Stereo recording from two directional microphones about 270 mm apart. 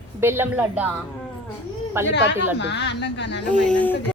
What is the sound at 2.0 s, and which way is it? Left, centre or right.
Speech, centre.